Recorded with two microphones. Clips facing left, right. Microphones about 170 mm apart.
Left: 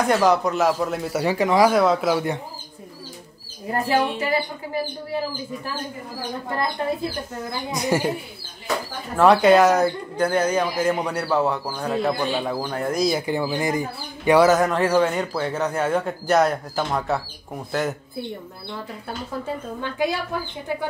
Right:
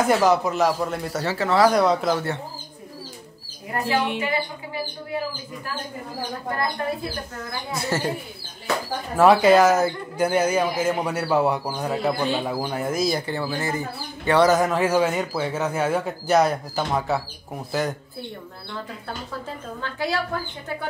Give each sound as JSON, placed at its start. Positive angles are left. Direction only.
{"t": 0.0, "sound": "speech", "side_deg": 0}
{"t": 1.2, "sound": "a woman's voice", "side_deg": 15}
{"t": 1.7, "sound": "speech", "side_deg": 0}
{"t": 3.7, "sound": "speech", "side_deg": 35}
{"t": 7.4, "sound": "a woman's voice", "side_deg": 15}
{"t": 9.1, "sound": "speech", "side_deg": -5}
{"t": 13.2, "sound": "speech", "side_deg": 15}
{"t": 19.4, "sound": "a woman's voice", "side_deg": 15}